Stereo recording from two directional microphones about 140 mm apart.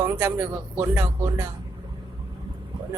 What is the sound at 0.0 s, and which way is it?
Speech, 20° right (ahead or behind).